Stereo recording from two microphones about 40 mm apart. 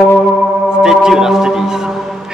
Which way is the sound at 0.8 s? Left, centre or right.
Centre.